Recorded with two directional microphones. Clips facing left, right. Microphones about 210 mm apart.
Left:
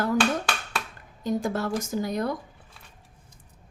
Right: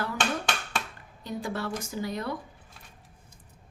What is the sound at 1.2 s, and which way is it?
A woman's voice, 45° left (ahead or behind).